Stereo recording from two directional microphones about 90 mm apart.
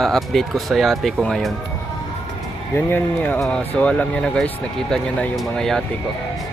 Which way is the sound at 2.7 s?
20° left (ahead or behind).